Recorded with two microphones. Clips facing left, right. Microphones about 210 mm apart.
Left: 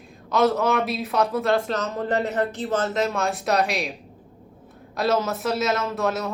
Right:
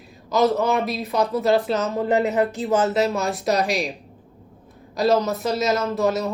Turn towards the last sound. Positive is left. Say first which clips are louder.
# right 4 dB
turn(degrees=0)  # may be behind; listen again after turning